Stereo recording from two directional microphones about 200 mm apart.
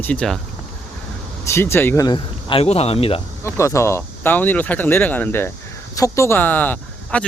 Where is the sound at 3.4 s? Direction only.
15° left (ahead or behind).